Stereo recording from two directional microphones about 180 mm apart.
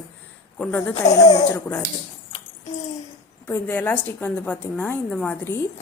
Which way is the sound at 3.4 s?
10° left (ahead or behind).